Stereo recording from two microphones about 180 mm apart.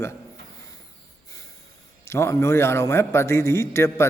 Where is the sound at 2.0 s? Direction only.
15° left (ahead or behind).